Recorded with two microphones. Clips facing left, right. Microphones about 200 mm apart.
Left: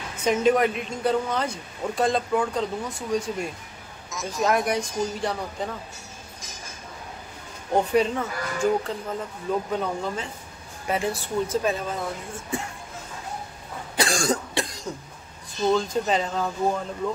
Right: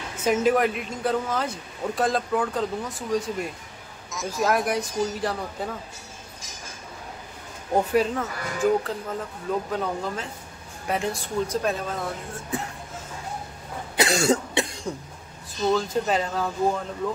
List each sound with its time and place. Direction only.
0.2 s speech: 5° right (ahead or behind)
7.7 s speech: centre (ahead or behind)
13.9 s cough: 20° right (ahead or behind)
14.9 s cough: centre (ahead or behind)
15.7 s speech: centre (ahead or behind)